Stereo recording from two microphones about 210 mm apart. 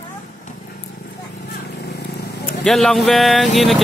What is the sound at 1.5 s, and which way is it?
Vehicle, 50° left (ahead or behind).